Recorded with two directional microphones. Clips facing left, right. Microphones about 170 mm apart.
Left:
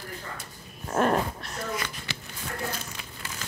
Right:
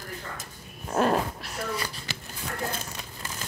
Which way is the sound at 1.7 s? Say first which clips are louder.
Even; 35° right (ahead or behind).